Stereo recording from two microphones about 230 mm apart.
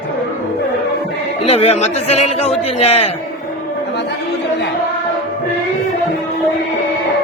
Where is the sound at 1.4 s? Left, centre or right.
Left.